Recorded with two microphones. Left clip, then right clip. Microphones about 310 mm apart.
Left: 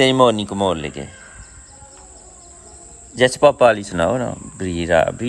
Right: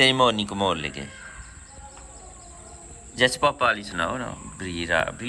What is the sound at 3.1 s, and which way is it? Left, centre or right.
Speech, left.